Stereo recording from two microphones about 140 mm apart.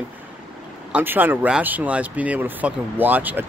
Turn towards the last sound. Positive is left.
turn(degrees=-10)  # may be behind; listen again after turning